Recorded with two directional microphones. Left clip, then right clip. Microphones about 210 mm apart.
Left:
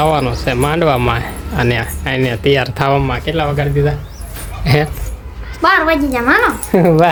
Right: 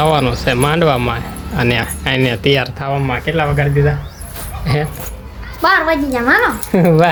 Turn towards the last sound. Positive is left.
turn(degrees=10)  # may be behind; listen again after turning